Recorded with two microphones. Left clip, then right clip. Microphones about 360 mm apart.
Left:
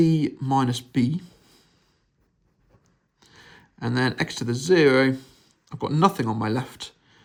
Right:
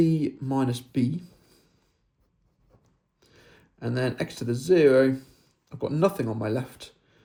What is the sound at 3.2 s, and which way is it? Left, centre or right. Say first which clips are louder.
Speech: left 6 dB; centre.